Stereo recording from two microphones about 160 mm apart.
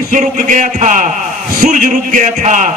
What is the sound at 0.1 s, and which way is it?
Speech, 50° right (ahead or behind).